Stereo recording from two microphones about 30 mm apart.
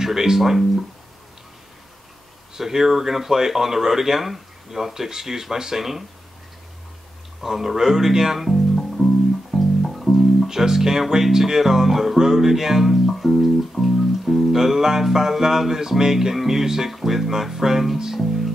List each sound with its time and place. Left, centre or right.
0.0 s speech: centre
2.5 s speech: centre
7.4 s speech: centre
8.4 s music: centre
10.4 s speech: centre